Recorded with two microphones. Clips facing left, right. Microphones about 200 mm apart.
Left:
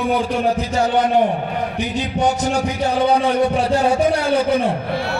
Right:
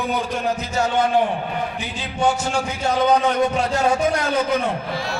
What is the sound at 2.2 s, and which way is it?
Music, 35° left (ahead or behind).